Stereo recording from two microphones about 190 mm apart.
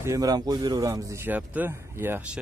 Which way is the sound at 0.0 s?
20° right (ahead or behind).